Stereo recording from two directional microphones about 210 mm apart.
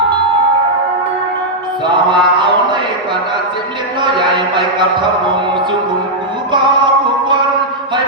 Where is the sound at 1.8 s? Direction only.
20° right (ahead or behind).